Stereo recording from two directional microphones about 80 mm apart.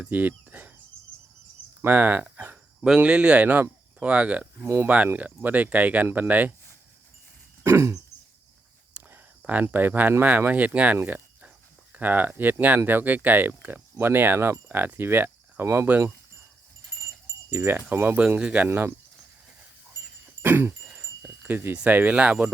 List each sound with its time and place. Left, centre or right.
0.0 s speech: right
1.8 s speech: right
4.6 s speech: right
5.1 s speech: right
7.6 s a sound: right
9.0 s a sound: right
9.4 s speech: centre
17.5 s speech: right
18.2 s speech: centre
18.7 s speech: right
20.4 s a sound: right
21.8 s speech: centre